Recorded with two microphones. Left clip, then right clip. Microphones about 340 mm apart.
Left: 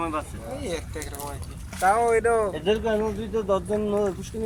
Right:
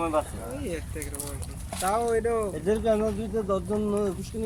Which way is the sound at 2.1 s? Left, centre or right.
Left.